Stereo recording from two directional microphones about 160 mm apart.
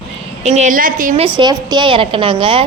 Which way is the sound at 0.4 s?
45° right (ahead or behind).